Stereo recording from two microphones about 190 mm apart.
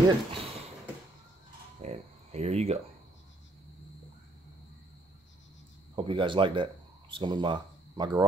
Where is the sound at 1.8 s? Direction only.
35° right (ahead or behind).